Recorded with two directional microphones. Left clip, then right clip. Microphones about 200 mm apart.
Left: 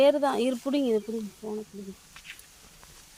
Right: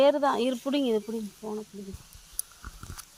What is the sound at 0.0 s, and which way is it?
Speech, 10° left (ahead or behind).